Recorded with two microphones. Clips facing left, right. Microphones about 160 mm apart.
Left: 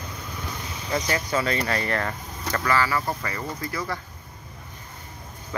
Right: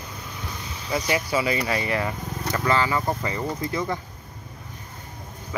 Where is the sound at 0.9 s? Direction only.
10° right (ahead or behind).